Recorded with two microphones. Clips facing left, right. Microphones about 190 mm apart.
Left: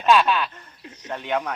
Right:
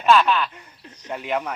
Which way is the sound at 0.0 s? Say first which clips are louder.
Right 1 dB; 15° left (ahead or behind).